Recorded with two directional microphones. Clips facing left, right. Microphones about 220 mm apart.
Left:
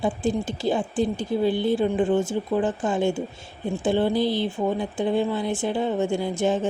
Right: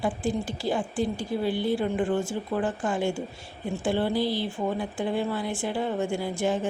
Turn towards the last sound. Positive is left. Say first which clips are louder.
# left 4 dB
turn(degrees=20)  # may be behind; listen again after turning